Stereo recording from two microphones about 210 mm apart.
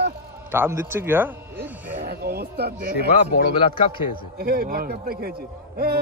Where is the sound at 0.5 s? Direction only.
10° right (ahead or behind).